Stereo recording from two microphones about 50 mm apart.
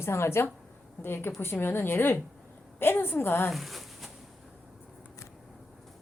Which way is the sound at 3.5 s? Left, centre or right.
Centre.